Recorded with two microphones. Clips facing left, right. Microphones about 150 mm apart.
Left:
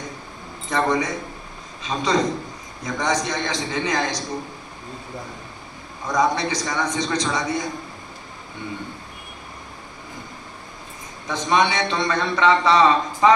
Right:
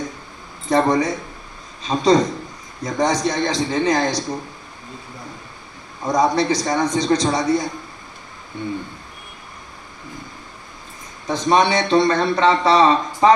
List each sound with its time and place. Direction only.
0.7 s a man's voice: 35° right (ahead or behind)
6.0 s a man's voice: 35° right (ahead or behind)
11.2 s a man's voice: 35° right (ahead or behind)